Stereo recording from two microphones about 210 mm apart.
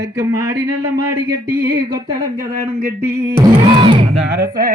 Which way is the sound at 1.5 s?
45° right (ahead or behind).